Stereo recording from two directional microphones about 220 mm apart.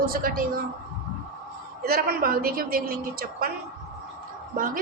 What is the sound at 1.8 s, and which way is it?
A woman's voice, 45° right (ahead or behind).